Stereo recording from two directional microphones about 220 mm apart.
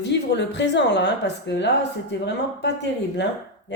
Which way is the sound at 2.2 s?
50° left (ahead or behind).